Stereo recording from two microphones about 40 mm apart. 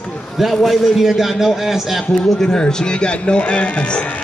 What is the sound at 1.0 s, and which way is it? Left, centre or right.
A man's voice, centre.